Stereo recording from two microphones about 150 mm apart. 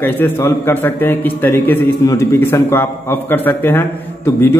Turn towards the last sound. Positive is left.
turn(degrees=15)  # may be behind; listen again after turning